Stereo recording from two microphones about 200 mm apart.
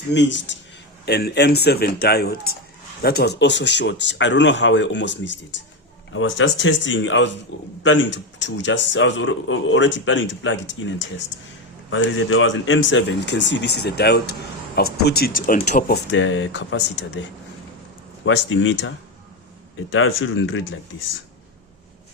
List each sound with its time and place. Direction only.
0.1 s a man's voice: 65° left (ahead or behind)
1.0 s a man's voice: 55° left (ahead or behind)
16.1 s a man's voice: 70° left (ahead or behind)
18.3 s speech: 75° left (ahead or behind)